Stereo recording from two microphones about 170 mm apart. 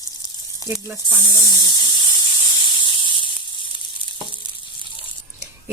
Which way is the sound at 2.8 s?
30° left (ahead or behind).